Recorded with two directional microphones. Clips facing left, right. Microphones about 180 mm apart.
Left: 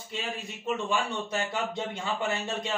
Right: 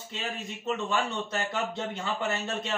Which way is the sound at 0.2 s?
10° left (ahead or behind).